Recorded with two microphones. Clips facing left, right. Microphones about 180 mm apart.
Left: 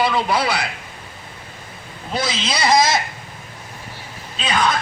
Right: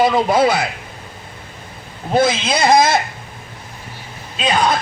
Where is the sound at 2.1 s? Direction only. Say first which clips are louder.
Right 8 dB; 50° right (ahead or behind).